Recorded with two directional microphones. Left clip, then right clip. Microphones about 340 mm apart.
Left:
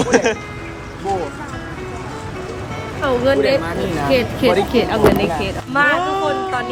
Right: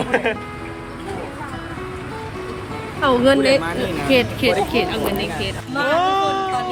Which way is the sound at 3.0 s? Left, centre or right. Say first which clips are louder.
Right 1 dB; right.